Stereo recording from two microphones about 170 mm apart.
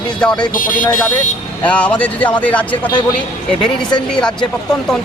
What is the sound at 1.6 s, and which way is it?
Speech, 5° left (ahead or behind).